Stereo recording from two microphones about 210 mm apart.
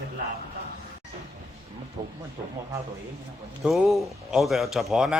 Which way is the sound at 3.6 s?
Centre (ahead or behind).